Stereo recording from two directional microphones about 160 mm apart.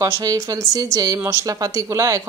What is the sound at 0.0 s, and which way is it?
A woman's voice, 20° right (ahead or behind).